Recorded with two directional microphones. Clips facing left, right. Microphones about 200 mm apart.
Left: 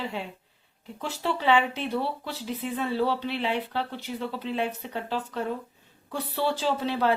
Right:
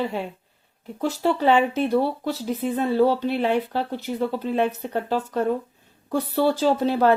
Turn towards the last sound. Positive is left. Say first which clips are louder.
# right 6 dB
turn(degrees=-45)  # may be behind; listen again after turning